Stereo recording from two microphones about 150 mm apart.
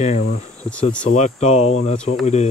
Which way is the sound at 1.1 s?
50° left (ahead or behind).